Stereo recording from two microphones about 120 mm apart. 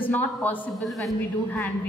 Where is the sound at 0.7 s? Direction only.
Centre (ahead or behind).